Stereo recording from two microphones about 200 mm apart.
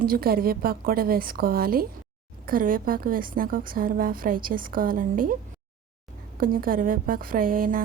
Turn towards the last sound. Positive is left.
turn(degrees=-45)  # may be behind; listen again after turning